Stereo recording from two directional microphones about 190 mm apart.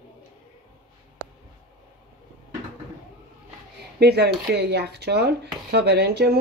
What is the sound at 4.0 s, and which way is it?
Speech, 60° right (ahead or behind).